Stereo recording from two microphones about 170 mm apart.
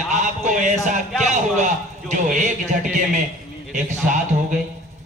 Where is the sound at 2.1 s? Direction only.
45° right (ahead or behind).